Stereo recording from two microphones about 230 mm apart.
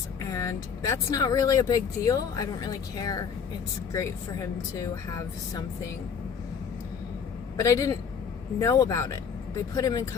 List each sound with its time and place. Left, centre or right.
0.3 s speech: centre
7.5 s a man's voice: centre